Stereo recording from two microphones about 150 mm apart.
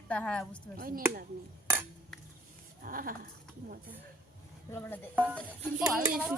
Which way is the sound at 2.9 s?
70° right (ahead or behind).